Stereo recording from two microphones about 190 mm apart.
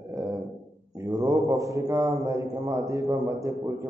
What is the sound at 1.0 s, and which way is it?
A man's voice, 15° right (ahead or behind).